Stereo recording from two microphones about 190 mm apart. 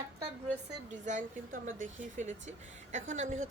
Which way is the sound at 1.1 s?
40° right (ahead or behind).